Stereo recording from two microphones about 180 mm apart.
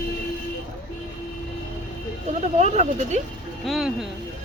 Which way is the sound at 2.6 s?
40° right (ahead or behind).